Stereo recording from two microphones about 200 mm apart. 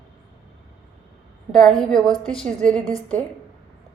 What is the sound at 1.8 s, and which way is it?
A woman's voice, centre (ahead or behind).